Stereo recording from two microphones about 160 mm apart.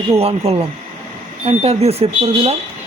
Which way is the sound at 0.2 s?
40° right (ahead or behind).